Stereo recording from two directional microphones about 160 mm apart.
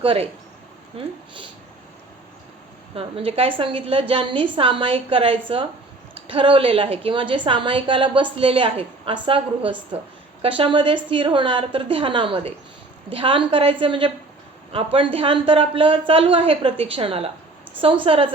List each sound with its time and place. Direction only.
0.0 s a woman's voice: 35° right (ahead or behind)
2.9 s a woman's voice: 35° right (ahead or behind)